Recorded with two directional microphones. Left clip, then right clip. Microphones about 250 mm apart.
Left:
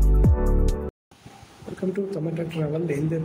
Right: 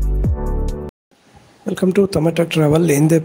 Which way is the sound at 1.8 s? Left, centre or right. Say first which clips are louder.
Right 12 dB; right.